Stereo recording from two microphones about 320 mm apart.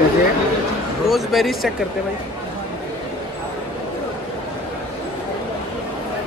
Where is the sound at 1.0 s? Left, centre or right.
Centre.